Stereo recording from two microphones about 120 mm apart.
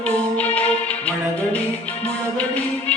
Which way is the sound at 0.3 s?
10° left (ahead or behind).